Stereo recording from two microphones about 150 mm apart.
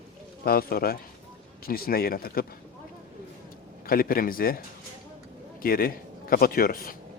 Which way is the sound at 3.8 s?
75° left (ahead or behind).